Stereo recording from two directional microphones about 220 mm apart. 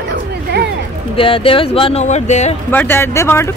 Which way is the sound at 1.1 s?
25° left (ahead or behind).